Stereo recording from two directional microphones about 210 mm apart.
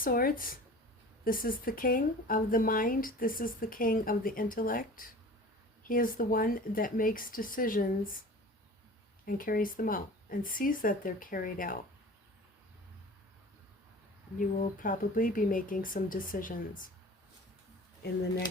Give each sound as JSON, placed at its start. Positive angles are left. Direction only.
{"t": 0.0, "sound": "speech", "side_deg": 45}
{"t": 9.2, "sound": "speech", "side_deg": 40}
{"t": 14.3, "sound": "speech", "side_deg": 40}